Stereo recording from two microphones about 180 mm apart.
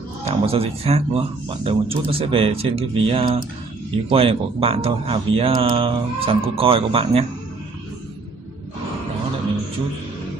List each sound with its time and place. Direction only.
0.2 s speech: 35° right (ahead or behind)